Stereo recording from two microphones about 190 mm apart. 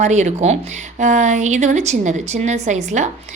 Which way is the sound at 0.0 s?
40° right (ahead or behind).